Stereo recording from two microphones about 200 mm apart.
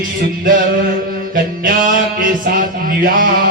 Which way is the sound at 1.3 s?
45° right (ahead or behind).